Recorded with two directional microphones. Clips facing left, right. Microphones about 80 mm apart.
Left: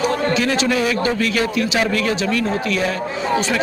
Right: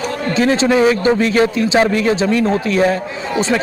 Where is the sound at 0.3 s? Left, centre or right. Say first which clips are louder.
Right 5 dB; right.